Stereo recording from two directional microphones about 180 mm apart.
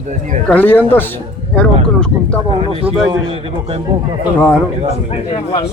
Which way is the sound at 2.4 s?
30° right (ahead or behind).